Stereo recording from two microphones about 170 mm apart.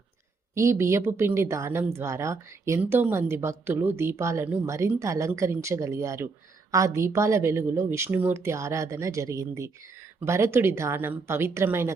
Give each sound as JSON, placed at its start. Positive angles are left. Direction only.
{"t": 0.5, "sound": "speech", "side_deg": -15}